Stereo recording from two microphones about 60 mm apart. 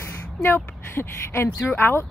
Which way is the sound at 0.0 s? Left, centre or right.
Left.